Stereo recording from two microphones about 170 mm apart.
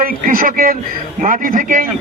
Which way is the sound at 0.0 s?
55° right (ahead or behind).